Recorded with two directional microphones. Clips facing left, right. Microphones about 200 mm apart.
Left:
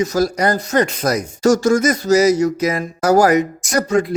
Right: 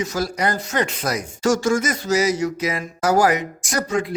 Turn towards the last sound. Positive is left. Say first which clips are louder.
# left 6 dB
turn(degrees=40)  # may be behind; listen again after turning